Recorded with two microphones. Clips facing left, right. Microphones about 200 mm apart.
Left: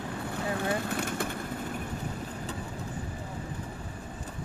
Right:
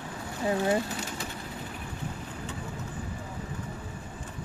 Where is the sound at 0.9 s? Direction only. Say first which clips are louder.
Left 5 dB; 55° left (ahead or behind).